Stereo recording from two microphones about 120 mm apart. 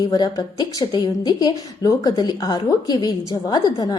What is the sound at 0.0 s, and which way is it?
A woman's voice, 35° left (ahead or behind).